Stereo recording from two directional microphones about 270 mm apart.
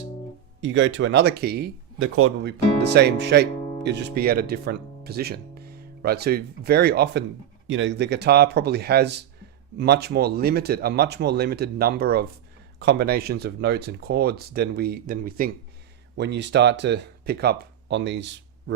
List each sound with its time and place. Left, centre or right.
0.6 s speech: right